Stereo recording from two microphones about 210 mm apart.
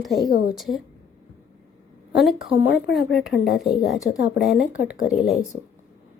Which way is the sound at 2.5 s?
65° left (ahead or behind).